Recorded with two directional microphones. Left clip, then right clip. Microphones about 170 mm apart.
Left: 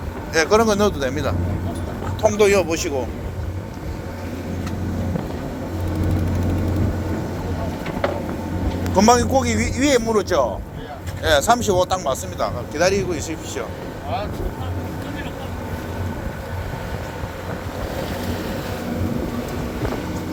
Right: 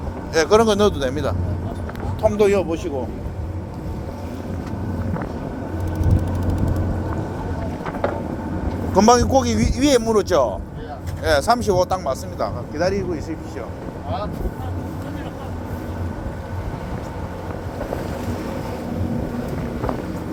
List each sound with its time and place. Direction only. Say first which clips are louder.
0.3 s a man's voice: right 1 dB; 35° right (ahead or behind)
2.2 s speech: left 1 dB; 15° right (ahead or behind)
2.6 s speech: left 2 dB; 5° left (ahead or behind)
8.9 s a man's voice: right 1 dB; 35° right (ahead or behind)
11.2 s speech: left 1 dB; 20° right (ahead or behind)
12.7 s a man's voice: left 3 dB; 35° left (ahead or behind)